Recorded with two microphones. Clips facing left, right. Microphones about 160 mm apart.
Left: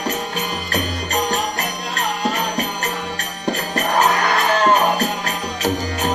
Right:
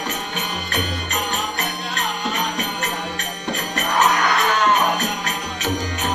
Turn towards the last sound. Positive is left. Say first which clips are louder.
# left 3 dB
turn(degrees=35)  # may be behind; listen again after turning